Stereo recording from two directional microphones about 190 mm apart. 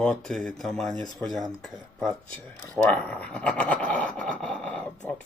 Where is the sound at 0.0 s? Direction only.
5° left (ahead or behind).